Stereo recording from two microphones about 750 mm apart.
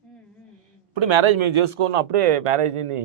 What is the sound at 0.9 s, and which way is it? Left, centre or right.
A man's voice, right.